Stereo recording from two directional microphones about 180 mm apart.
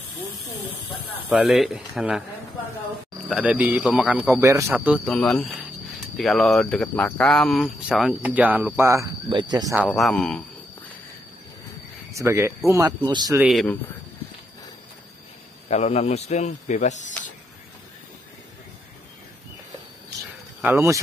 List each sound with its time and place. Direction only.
1.3 s speech: centre (ahead or behind)
3.3 s speech: 5° right (ahead or behind)
5.1 s speech: 5° left (ahead or behind); by 9.8 s 20° right (ahead or behind)
9.8 s speech: 5° left (ahead or behind)
12.1 s speech: 15° right (ahead or behind)
13.4 s speech: centre (ahead or behind)
15.7 s speech: 35° left (ahead or behind)
20.6 s speech: 15° right (ahead or behind)